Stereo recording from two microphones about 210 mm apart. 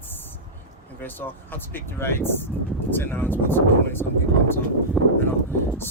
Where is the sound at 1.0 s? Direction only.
10° left (ahead or behind).